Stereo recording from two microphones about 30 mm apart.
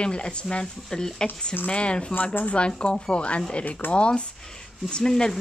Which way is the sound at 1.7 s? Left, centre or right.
Left.